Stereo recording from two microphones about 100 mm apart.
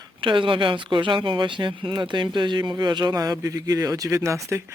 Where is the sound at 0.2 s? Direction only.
60° right (ahead or behind).